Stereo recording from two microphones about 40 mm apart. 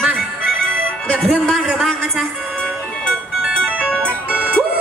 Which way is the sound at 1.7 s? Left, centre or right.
Centre.